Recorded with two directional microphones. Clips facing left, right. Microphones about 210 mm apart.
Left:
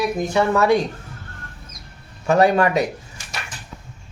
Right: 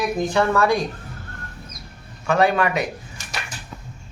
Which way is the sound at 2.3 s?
40° left (ahead or behind).